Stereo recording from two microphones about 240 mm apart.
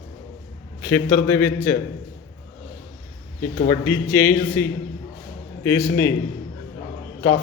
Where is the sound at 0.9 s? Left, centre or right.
Centre.